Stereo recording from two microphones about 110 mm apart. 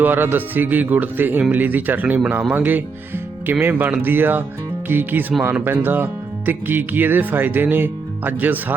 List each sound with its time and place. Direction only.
0.0 s speech: 20° right (ahead or behind)